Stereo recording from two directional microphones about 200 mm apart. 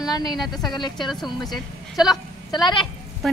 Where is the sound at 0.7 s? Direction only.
20° left (ahead or behind).